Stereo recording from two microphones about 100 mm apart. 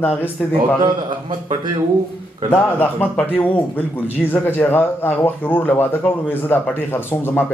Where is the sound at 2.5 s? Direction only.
20° left (ahead or behind).